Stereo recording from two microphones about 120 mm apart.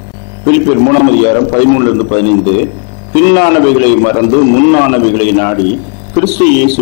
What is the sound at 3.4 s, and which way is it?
A man's voice, 15° left (ahead or behind).